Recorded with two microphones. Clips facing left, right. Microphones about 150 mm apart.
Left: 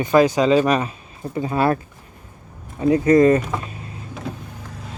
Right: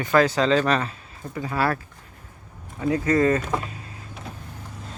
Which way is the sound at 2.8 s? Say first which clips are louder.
Left 7 dB; 20° left (ahead or behind).